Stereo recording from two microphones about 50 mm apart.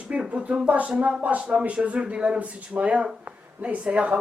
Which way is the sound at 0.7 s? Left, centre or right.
Right.